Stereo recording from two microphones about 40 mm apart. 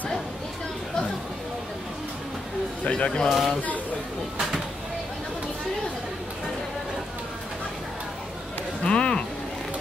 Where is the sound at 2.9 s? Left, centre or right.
Left.